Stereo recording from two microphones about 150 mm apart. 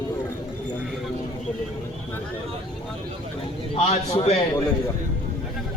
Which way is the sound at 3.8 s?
45° left (ahead or behind).